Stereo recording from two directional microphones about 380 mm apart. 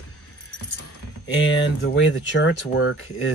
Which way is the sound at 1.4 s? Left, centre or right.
Left.